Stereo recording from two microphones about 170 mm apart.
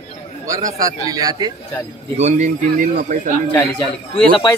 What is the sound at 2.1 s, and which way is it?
A man's voice, 45° right (ahead or behind).